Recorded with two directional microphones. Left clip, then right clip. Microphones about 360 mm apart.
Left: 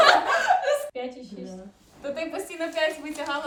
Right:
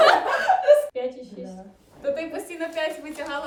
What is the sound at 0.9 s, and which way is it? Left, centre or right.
A woman's voice, centre.